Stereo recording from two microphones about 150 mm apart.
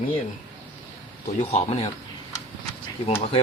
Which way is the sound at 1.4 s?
40° left (ahead or behind).